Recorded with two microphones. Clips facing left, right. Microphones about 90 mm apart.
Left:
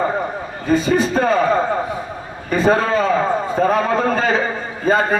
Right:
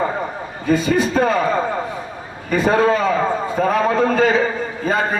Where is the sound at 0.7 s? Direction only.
35° left (ahead or behind).